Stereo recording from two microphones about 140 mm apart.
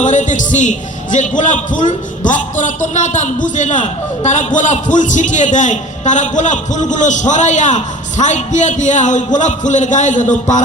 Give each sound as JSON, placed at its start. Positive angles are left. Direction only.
{"t": 0.0, "sound": "a man's voice", "side_deg": 60}